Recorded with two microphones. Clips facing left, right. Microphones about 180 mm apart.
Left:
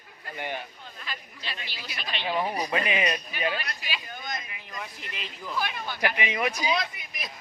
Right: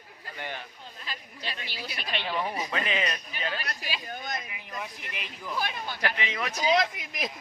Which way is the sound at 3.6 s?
40° right (ahead or behind).